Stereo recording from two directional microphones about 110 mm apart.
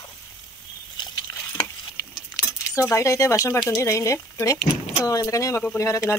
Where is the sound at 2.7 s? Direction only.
25° left (ahead or behind).